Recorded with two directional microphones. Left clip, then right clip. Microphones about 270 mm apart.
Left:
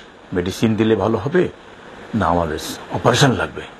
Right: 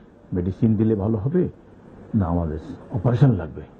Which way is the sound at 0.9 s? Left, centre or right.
Left.